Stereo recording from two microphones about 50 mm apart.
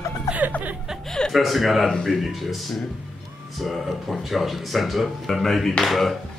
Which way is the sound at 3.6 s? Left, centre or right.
Centre.